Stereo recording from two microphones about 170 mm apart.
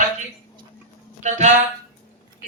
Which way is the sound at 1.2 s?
45° right (ahead or behind).